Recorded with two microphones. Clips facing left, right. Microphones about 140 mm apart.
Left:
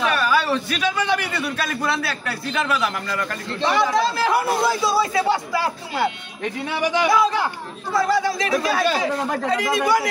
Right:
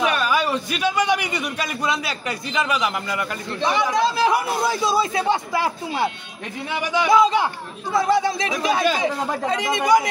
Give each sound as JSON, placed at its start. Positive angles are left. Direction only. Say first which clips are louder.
{"t": 0.0, "sound": "a man's voice", "louder": "even", "side_deg": -15}
{"t": 7.1, "sound": "speech", "louder": "right 2 dB", "side_deg": -20}